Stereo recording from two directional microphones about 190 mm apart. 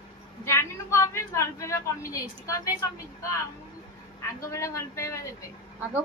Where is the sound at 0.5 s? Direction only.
15° left (ahead or behind).